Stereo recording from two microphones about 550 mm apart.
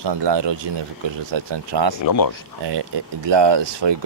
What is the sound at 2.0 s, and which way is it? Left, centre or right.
Speech, left.